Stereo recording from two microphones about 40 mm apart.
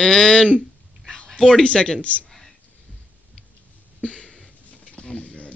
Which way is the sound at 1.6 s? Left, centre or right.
Left.